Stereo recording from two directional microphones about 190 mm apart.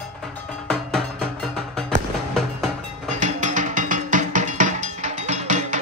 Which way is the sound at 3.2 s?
40° right (ahead or behind).